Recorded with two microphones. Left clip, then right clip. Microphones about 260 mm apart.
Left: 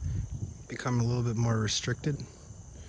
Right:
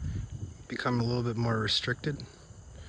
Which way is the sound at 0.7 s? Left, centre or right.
Centre.